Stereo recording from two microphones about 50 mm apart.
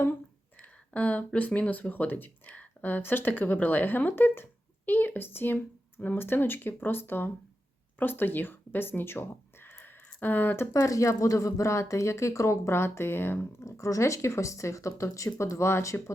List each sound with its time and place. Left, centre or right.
0.6 s speech: left
10.8 s speech: left
13.6 s speech: left